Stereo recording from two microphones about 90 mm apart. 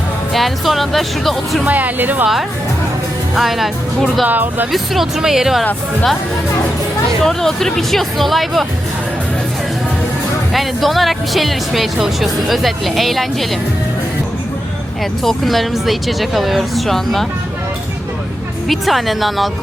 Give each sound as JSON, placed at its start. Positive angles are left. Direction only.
{"t": 0.3, "sound": "speech", "side_deg": 0}
{"t": 1.6, "sound": "speech", "side_deg": -20}
{"t": 3.3, "sound": "speech", "side_deg": 0}
{"t": 4.3, "sound": "speech", "side_deg": -20}
{"t": 4.7, "sound": "speech", "side_deg": -5}
{"t": 7.2, "sound": "speech", "side_deg": 5}
{"t": 10.5, "sound": "speech", "side_deg": 0}
{"t": 15.2, "sound": "speech", "side_deg": 0}
{"t": 18.7, "sound": "speech", "side_deg": 0}